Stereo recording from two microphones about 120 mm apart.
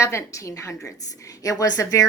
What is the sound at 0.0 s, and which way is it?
A woman's voice, 25° left (ahead or behind).